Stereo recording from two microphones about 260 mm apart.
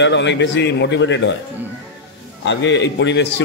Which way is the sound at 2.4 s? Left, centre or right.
Left.